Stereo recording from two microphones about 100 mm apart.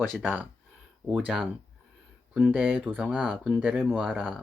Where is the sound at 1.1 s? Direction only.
5° right (ahead or behind).